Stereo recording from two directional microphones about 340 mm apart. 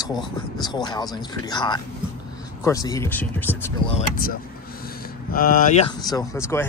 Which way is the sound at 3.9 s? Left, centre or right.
Left.